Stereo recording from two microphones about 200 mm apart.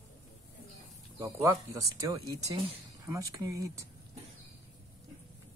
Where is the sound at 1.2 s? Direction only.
15° right (ahead or behind).